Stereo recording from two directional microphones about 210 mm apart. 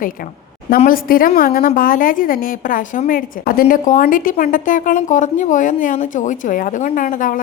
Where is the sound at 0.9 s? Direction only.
45° left (ahead or behind).